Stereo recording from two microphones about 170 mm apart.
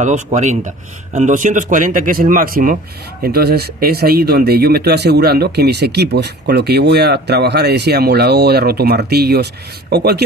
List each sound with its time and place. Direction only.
0.0 s speech: 45° right (ahead or behind); by 10.2 s 75° right (ahead or behind)